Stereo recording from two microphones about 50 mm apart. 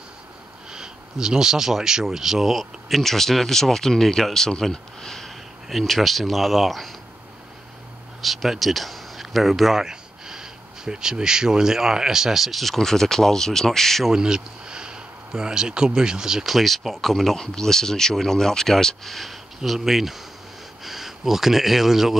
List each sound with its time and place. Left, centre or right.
0.7 s speech: centre
8.2 s speech: centre
14.1 s speech: centre
16.5 s speech: centre